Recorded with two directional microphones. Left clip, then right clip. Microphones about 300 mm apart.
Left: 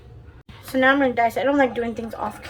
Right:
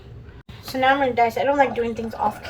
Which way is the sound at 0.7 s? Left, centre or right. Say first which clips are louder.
Left 1 dB; centre.